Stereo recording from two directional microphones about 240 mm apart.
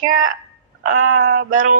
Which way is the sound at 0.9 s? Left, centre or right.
Right.